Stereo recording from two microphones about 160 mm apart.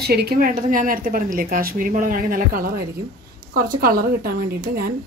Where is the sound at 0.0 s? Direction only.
85° right.